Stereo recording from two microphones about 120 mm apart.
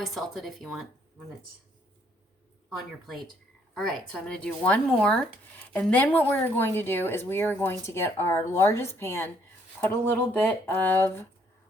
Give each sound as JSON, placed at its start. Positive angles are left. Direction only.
{"t": 0.0, "sound": "speech", "side_deg": 0}
{"t": 2.7, "sound": "speech", "side_deg": 0}